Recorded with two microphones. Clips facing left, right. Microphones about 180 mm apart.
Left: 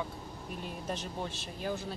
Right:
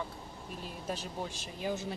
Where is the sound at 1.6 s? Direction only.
20° right (ahead or behind).